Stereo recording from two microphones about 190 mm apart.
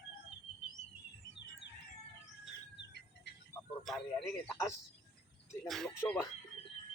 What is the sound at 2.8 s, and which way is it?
Music, 65° left (ahead or behind).